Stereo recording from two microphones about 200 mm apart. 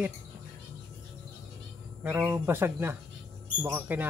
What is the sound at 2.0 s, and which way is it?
Speech, 10° right (ahead or behind).